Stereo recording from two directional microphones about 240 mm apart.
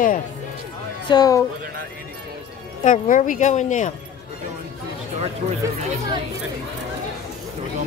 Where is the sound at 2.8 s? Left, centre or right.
Left.